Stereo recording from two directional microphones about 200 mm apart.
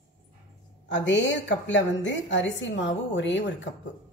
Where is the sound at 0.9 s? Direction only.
65° left (ahead or behind).